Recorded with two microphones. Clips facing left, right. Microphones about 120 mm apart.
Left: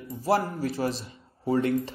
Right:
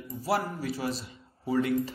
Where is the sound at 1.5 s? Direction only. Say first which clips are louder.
Left 2 dB; 30° left (ahead or behind).